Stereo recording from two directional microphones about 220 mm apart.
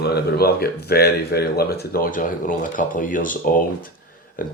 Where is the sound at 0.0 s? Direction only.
45° left (ahead or behind).